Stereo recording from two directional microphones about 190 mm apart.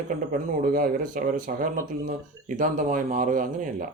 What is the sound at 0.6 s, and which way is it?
Speech, 45° right (ahead or behind).